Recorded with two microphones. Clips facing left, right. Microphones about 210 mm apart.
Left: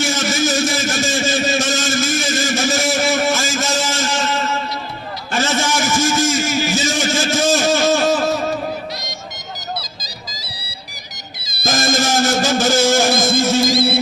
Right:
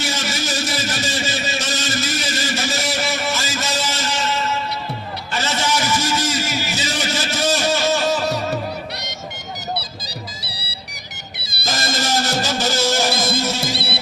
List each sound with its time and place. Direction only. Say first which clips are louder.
0.0 s a sound: left 6 dB; 45° left (ahead or behind)
10.0 s music: right 2 dB; 65° right (ahead or behind)
11.6 s music: left 6 dB; 45° left (ahead or behind)